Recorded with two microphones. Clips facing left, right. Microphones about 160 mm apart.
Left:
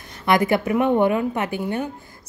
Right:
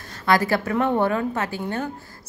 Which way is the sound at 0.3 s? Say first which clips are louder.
Left 2 dB; 20° left (ahead or behind).